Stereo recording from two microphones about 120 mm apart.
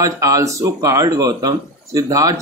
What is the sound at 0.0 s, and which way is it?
Speech, 30° right (ahead or behind).